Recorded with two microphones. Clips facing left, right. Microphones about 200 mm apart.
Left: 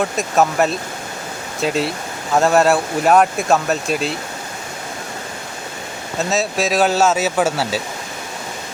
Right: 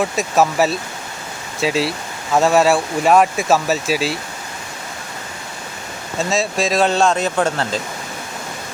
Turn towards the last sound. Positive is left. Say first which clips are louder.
# left 1 dB
turn(degrees=5)  # may be behind; listen again after turning